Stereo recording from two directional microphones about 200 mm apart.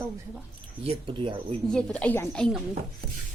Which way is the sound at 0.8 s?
25° right (ahead or behind).